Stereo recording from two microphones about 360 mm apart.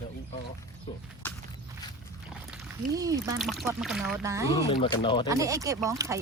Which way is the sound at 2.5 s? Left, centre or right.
Centre.